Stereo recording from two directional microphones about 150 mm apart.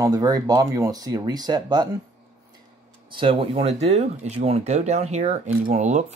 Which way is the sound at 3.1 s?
35° right (ahead or behind).